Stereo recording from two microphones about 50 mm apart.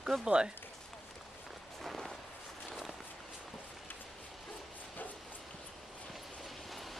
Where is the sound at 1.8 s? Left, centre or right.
Centre.